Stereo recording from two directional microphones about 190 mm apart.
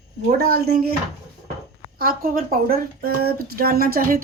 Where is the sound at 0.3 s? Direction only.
55° right (ahead or behind).